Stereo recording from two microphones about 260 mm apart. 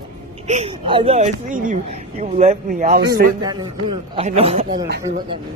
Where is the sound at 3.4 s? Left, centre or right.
Centre.